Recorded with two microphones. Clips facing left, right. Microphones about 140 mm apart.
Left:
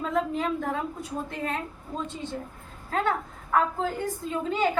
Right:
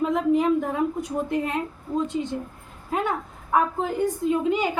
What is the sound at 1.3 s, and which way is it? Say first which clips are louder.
Speech: right 6 dB; 15° right (ahead or behind).